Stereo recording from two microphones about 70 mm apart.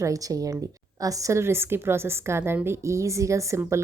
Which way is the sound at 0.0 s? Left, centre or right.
Right.